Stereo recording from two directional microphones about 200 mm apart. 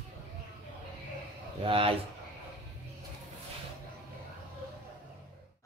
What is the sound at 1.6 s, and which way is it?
Speech, 25° right (ahead or behind).